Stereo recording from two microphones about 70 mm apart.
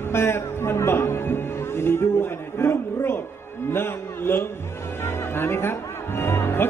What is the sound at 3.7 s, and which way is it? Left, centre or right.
Music, left.